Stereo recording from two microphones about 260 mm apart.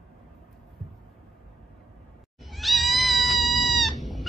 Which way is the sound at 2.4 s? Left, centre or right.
Centre.